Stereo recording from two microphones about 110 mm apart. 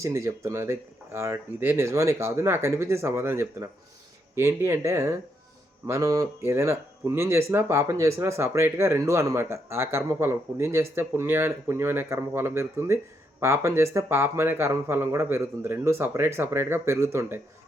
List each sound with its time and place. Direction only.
0.0 s speech: 30° right (ahead or behind)